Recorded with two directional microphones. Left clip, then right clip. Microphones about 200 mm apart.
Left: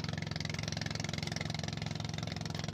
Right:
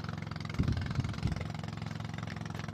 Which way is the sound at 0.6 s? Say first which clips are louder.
Even; 50° left (ahead or behind).